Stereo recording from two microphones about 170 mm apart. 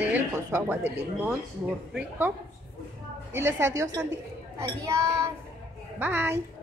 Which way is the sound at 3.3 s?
15° right (ahead or behind).